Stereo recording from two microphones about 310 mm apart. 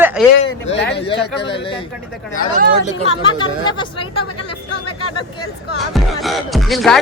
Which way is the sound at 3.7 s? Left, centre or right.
Centre.